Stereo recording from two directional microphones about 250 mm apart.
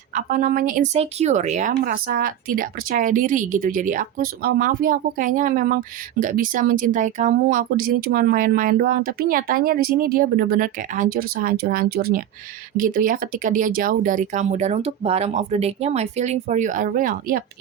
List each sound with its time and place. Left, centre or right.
0.1 s speech: right